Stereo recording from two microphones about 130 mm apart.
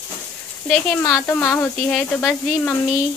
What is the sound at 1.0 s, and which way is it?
Speech, 20° left (ahead or behind).